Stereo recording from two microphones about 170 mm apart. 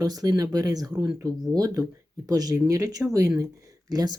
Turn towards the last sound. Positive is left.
turn(degrees=-20)  # may be behind; listen again after turning